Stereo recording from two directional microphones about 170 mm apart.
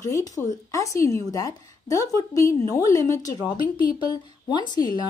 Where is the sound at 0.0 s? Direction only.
20° left (ahead or behind).